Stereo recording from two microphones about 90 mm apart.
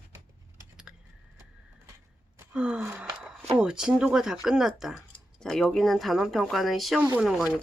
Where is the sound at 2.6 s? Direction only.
10° right (ahead or behind).